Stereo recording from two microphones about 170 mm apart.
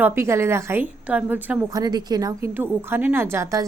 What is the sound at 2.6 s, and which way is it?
A woman's voice, 10° right (ahead or behind).